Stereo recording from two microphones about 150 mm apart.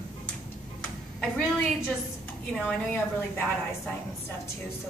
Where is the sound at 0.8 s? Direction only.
5° left (ahead or behind).